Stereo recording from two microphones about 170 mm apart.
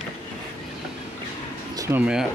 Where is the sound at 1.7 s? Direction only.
20° right (ahead or behind).